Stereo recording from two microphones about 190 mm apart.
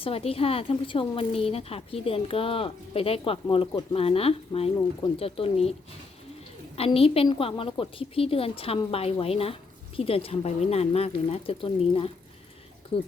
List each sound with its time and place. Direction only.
0.0 s a woman's voice: 30° left (ahead or behind)
6.7 s a woman's voice: 30° left (ahead or behind)